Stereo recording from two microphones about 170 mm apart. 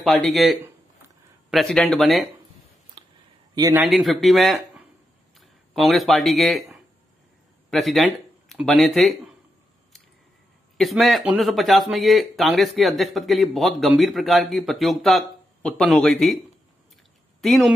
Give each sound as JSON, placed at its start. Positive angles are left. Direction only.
{"t": 0.0, "sound": "speech", "side_deg": 0}
{"t": 3.0, "sound": "a sound", "side_deg": -25}
{"t": 3.7, "sound": "speech", "side_deg": -5}
{"t": 10.8, "sound": "speech", "side_deg": 0}
{"t": 17.4, "sound": "speech", "side_deg": 0}